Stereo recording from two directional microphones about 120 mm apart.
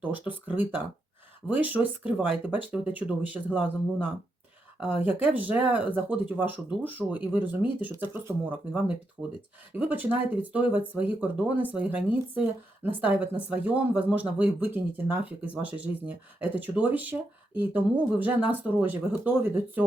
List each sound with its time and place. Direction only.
0.0 s a woman's voice: 15° right (ahead or behind)
4.8 s a woman's voice: 15° right (ahead or behind)